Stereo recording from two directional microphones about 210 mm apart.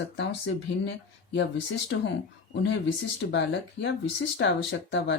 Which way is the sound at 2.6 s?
55° left (ahead or behind).